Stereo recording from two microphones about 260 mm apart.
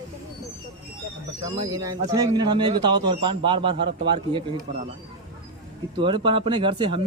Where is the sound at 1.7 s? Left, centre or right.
Centre.